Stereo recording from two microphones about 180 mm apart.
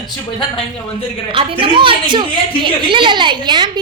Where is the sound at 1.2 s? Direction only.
30° right (ahead or behind).